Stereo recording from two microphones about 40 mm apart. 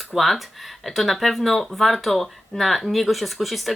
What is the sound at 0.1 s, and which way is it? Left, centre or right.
Speech, centre.